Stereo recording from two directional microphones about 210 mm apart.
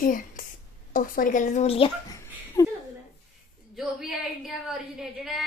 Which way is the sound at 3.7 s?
Centre (ahead or behind).